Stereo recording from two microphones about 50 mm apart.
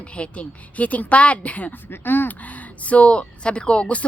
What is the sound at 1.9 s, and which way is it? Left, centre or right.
Speech, left.